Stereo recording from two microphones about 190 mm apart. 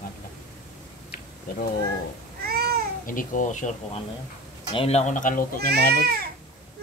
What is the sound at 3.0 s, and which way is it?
Speech, 45° left (ahead or behind).